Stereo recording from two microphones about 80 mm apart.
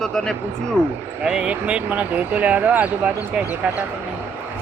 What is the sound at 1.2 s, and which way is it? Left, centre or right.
Speech, centre.